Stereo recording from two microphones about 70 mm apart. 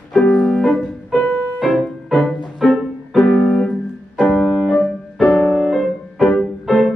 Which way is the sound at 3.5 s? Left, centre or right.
Centre.